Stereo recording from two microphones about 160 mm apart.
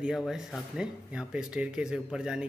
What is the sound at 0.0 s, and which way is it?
Speech, 5° right (ahead or behind).